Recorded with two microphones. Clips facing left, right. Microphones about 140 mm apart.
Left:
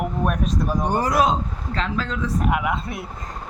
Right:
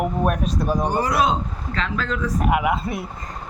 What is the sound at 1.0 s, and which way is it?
A man's voice, 40° left (ahead or behind).